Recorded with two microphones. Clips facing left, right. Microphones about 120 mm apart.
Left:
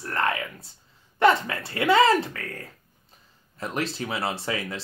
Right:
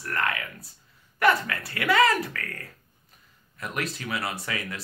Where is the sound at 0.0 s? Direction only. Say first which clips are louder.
Left 3 dB; 30° left (ahead or behind).